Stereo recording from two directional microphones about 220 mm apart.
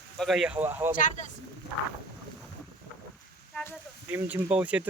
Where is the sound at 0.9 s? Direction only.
35° left (ahead or behind).